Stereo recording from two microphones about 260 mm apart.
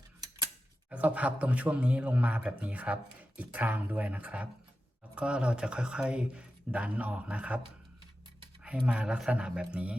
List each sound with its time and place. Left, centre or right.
0.9 s a man's voice: centre
8.9 s a man's voice: centre